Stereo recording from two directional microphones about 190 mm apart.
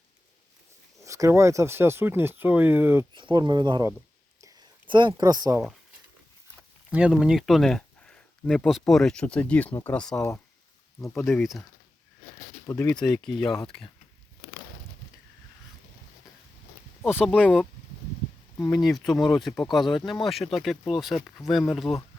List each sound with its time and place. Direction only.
1.0 s speech: 15° right (ahead or behind)
3.2 s speech: 25° right (ahead or behind)
4.4 s a sound: 20° right (ahead or behind)
6.9 s speech: 5° right (ahead or behind); by 10.4 s 15° left (ahead or behind)
11.0 s speech: centre (ahead or behind)
12.6 s speech: 10° left (ahead or behind)
17.1 s speech: 5° right (ahead or behind)
18.7 s speech: centre (ahead or behind)
19.1 s speech: 20° left (ahead or behind)
19.4 s speech: centre (ahead or behind)